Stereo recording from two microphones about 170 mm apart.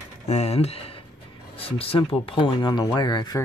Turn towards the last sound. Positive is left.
turn(degrees=25)  # may be behind; listen again after turning